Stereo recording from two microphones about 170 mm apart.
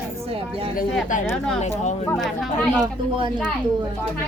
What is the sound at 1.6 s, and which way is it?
Speech, 40° left (ahead or behind).